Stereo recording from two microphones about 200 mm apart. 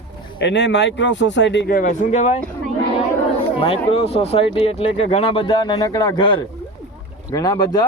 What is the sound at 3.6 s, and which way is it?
Speech, 30° left (ahead or behind).